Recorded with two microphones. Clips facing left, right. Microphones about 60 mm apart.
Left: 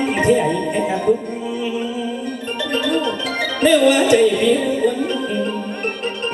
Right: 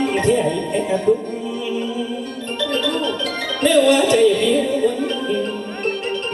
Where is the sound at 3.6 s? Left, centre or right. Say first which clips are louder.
Even; left.